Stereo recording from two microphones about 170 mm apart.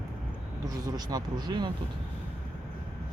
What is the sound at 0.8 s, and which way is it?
Speech, 25° right (ahead or behind).